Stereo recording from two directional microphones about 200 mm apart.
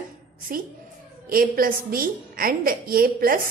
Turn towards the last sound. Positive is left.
turn(degrees=-45)  # may be behind; listen again after turning